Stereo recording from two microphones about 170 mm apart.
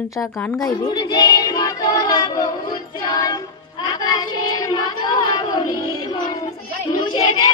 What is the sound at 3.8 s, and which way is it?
Child singing, 25° left (ahead or behind).